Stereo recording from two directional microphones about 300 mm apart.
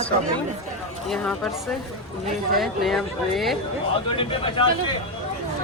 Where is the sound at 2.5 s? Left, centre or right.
Centre.